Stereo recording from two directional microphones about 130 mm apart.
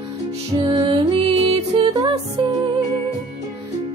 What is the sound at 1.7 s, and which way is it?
Music, 30° right (ahead or behind).